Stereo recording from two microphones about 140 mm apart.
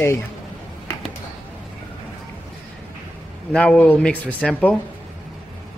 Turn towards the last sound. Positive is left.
turn(degrees=10)  # may be behind; listen again after turning